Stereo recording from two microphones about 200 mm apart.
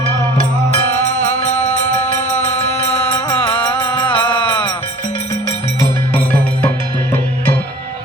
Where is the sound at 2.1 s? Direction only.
35° left (ahead or behind).